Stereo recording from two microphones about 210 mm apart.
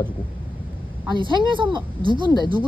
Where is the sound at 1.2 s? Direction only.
25° right (ahead or behind).